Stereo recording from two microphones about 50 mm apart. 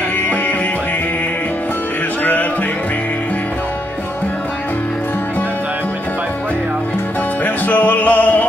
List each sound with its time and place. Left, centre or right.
7.4 s music: left